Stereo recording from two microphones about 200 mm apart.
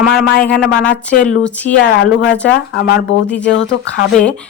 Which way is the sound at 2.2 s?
60° left (ahead or behind).